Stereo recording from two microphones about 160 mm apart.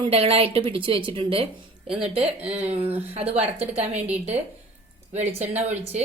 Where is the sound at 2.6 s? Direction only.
40° right (ahead or behind).